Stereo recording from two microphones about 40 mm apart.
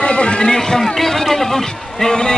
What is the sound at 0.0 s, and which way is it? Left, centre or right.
Speech, left.